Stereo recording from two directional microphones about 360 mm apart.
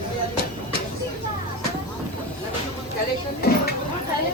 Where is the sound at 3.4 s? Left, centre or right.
Left.